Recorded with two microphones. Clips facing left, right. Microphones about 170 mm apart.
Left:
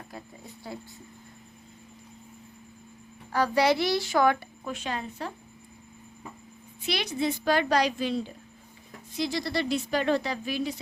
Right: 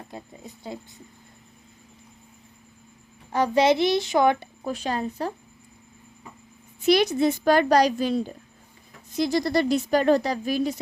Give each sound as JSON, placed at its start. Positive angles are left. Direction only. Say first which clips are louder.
{"t": 0.1, "sound": "a child's voice", "louder": "right 3 dB", "side_deg": -20}
{"t": 3.3, "sound": "a child's voice", "louder": "right 4 dB", "side_deg": -20}
{"t": 4.6, "sound": "speech", "louder": "right 7 dB", "side_deg": -35}
{"t": 6.8, "sound": "speech", "louder": "right 9 dB", "side_deg": -45}